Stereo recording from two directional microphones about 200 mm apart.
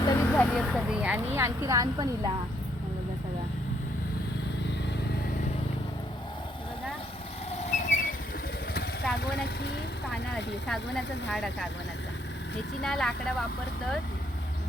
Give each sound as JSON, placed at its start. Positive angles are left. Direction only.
{"t": 0.0, "sound": "a woman's voice", "side_deg": 15}
{"t": 7.6, "sound": "a sound", "side_deg": 35}
{"t": 8.7, "sound": "vehicle", "side_deg": 50}
{"t": 10.9, "sound": "speech", "side_deg": 0}
{"t": 12.8, "sound": "speech", "side_deg": 0}